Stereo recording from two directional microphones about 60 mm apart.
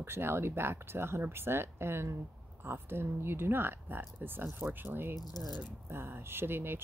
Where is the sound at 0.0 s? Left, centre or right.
Right.